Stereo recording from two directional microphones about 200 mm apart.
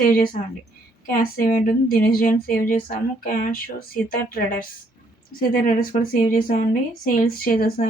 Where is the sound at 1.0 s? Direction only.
45° left (ahead or behind).